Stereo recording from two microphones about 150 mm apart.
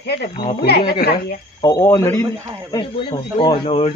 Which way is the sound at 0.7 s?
90° left.